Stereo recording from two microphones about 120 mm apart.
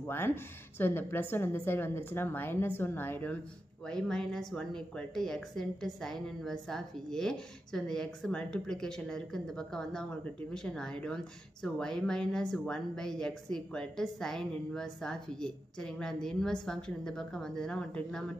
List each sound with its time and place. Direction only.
0.0 s speech: 20° left (ahead or behind)